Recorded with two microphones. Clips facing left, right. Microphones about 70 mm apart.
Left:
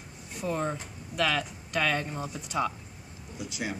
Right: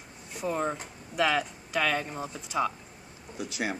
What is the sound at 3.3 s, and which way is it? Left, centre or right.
Speech, right.